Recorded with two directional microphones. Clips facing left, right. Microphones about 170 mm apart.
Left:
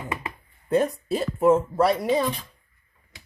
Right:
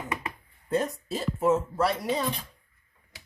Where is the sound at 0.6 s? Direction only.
60° left (ahead or behind).